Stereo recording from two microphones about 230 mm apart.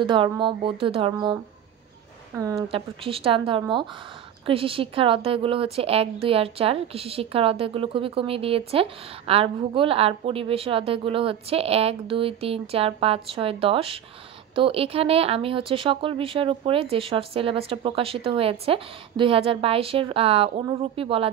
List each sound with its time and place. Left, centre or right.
0.0 s a woman's voice: right
2.3 s a woman's voice: centre
2.7 s a woman's voice: right